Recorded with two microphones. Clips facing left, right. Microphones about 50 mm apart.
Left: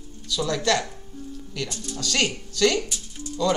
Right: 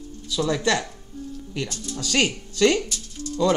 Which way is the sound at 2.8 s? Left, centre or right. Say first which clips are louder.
Right 2 dB; centre.